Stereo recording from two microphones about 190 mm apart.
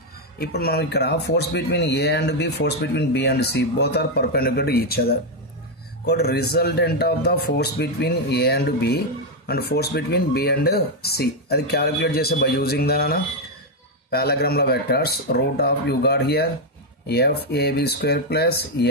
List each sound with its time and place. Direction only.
0.4 s speech: 55° left (ahead or behind)